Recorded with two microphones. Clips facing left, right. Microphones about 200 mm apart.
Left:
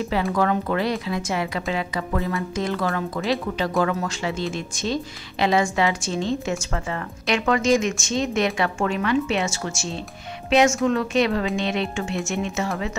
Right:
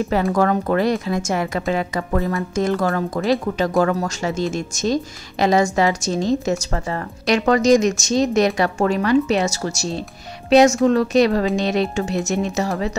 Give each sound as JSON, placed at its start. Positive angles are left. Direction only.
{"t": 0.1, "sound": "speech", "side_deg": -45}